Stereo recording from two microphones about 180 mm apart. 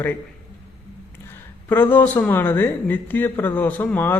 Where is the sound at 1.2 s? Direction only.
10° left (ahead or behind).